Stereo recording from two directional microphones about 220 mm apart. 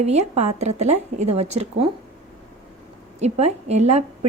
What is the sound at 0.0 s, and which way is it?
Speech, 30° right (ahead or behind).